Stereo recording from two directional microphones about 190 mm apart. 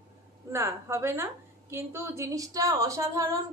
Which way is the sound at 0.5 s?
15° right (ahead or behind).